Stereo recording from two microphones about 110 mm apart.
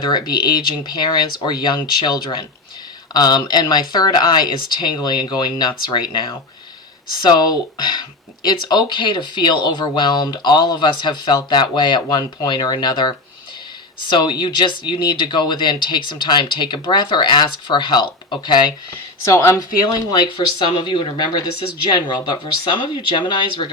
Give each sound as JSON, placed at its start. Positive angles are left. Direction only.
{"t": 0.0, "sound": "speech", "side_deg": 40}
{"t": 19.3, "sound": "speech", "side_deg": 25}
{"t": 20.1, "sound": "speech", "side_deg": 45}